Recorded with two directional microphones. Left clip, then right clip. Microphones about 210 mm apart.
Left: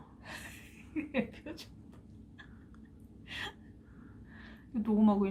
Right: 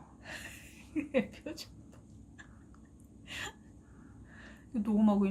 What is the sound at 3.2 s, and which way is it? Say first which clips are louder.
Gasp: even; 20° right (ahead or behind).